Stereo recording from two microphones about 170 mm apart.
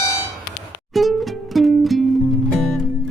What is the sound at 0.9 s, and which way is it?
Music, centre (ahead or behind).